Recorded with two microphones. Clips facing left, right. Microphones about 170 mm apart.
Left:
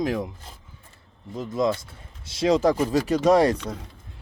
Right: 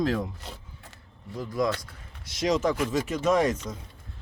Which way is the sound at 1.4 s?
25° left (ahead or behind).